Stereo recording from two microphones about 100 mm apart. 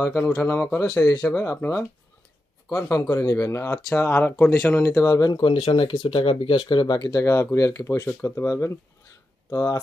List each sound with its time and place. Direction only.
0.0 s speech: 30° left (ahead or behind)
2.9 s speech: 35° left (ahead or behind)
5.4 s speech: 70° left (ahead or behind); by 7.2 s 40° left (ahead or behind)
7.2 s speech: 30° left (ahead or behind)